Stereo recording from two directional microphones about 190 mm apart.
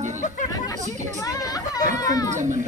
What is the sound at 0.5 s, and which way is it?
Speech, 20° left (ahead or behind).